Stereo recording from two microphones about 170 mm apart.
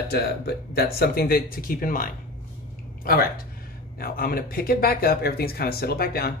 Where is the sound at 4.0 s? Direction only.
60° left (ahead or behind).